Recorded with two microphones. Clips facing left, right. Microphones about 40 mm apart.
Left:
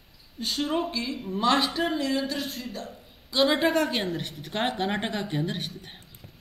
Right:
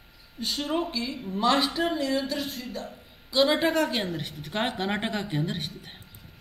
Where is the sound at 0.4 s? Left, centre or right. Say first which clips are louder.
Left 1 dB; centre.